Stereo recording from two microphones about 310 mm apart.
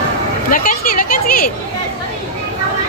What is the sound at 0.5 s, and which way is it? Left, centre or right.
Chatter, left.